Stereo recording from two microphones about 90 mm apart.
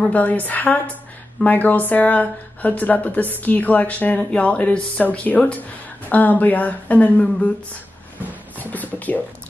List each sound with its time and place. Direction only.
0.0 s speech: 15° left (ahead or behind)
8.5 s music: 20° left (ahead or behind)